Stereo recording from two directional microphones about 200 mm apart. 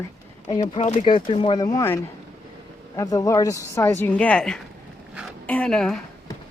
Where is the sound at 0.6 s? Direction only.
35° left (ahead or behind).